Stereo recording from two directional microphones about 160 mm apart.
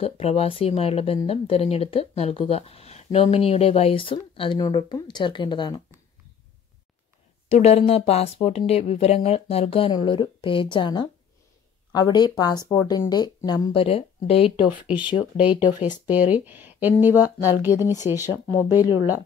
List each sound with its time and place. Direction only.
0.0 s speech: 40° left (ahead or behind)
7.4 s speech: 45° left (ahead or behind); by 13.7 s 25° left (ahead or behind)
13.7 s speech: 35° left (ahead or behind)
15.6 s speech: 10° right (ahead or behind)